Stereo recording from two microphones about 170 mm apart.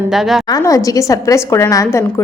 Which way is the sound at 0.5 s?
20° left (ahead or behind).